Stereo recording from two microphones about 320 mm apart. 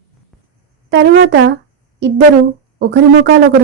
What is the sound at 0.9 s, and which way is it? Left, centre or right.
Speech, right.